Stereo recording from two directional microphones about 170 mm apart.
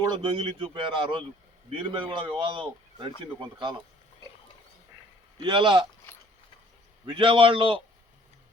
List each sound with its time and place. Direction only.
0.0 s a man's voice: 25° right (ahead or behind)
5.4 s a man's voice: 30° right (ahead or behind)
7.0 s speech: 30° right (ahead or behind)